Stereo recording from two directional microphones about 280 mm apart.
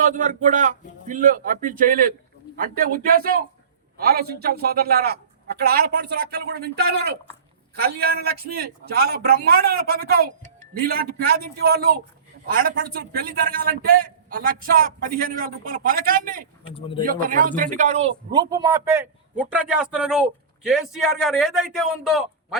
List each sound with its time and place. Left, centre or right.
0.0 s a man's voice: right; by 22.5 s centre